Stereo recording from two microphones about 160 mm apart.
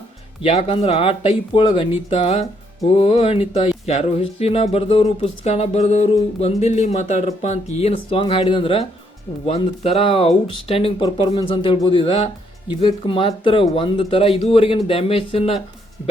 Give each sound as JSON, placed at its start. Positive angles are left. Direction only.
{"t": 0.4, "sound": "speech", "side_deg": 35}